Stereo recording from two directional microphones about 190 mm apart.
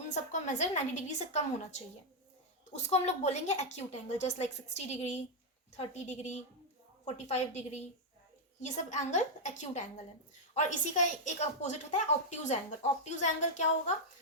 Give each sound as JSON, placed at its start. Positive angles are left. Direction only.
{"t": 0.1, "sound": "a woman's voice", "side_deg": 40}
{"t": 2.9, "sound": "a woman's voice", "side_deg": 35}